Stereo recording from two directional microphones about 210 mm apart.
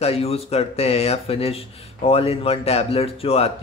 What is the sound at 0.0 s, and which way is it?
Speech, 30° left (ahead or behind).